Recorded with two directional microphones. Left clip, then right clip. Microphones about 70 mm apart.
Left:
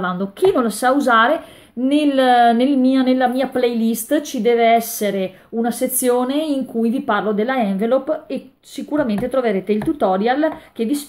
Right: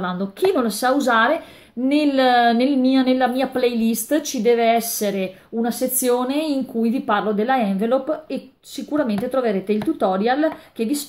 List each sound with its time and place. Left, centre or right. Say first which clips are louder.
0.0 s a woman's voice: left 3 dB; left